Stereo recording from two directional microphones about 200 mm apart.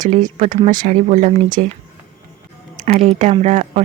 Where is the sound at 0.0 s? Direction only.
40° right (ahead or behind).